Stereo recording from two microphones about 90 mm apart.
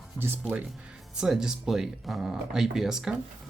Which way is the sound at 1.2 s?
5° right (ahead or behind).